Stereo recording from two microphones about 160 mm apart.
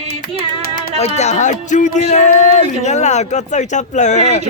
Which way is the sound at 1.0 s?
45° left (ahead or behind).